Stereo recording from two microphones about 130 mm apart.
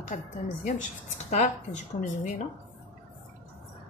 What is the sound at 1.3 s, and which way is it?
Speech, 65° left (ahead or behind).